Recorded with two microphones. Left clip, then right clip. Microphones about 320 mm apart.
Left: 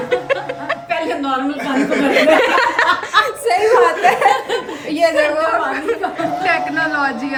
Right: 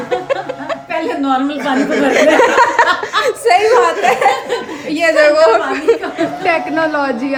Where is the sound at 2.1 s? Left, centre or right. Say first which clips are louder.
Right 2 dB; right.